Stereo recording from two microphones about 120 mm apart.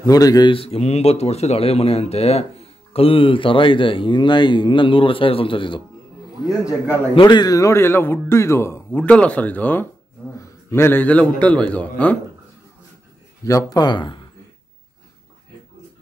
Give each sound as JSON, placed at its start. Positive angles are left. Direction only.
{"t": 0.0, "sound": "speech", "side_deg": 30}
{"t": 0.5, "sound": "speech", "side_deg": 55}
{"t": 6.4, "sound": "a man's voice", "side_deg": -10}
{"t": 7.2, "sound": "a man's voice", "side_deg": 40}
{"t": 13.4, "sound": "speech", "side_deg": 30}